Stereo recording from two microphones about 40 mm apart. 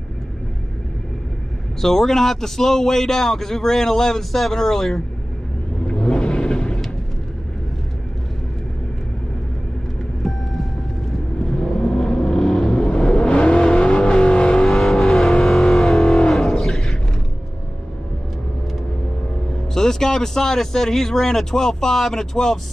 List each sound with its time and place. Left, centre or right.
1.8 s a man's voice: centre
5.9 s vehicle: left
10.2 s vehicle: centre
11.5 s vehicle: centre
14.5 s vehicle: centre
16.3 s music: centre
19.7 s a man's voice: centre